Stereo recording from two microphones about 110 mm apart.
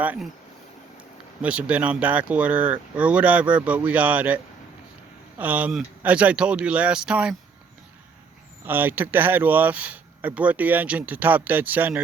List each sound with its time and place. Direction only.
1.4 s speech: 10° right (ahead or behind)
5.4 s speech: 15° right (ahead or behind)
8.6 s speech: 20° right (ahead or behind)